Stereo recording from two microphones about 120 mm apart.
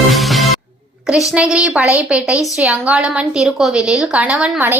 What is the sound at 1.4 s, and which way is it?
A woman's voice, 5° right (ahead or behind).